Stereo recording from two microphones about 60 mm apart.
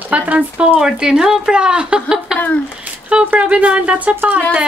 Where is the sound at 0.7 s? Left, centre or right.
Centre.